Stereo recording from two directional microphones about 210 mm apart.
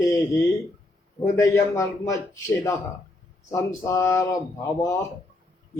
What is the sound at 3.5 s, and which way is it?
A man's voice, 15° left (ahead or behind).